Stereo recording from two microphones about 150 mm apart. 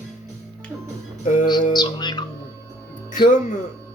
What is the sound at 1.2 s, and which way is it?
Music, 55° left (ahead or behind).